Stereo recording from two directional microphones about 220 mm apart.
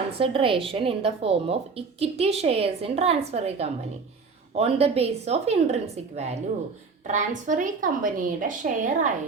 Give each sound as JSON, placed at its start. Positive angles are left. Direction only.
{"t": 0.2, "sound": "a woman's voice", "side_deg": -25}